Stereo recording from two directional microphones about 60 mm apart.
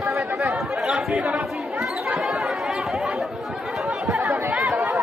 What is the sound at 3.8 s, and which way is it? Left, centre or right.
Chatter, centre.